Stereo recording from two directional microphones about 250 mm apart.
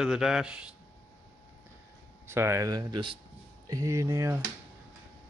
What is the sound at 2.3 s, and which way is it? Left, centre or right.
Speech, centre.